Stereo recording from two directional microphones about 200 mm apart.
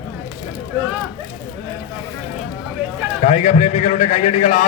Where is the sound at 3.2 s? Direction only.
35° left (ahead or behind).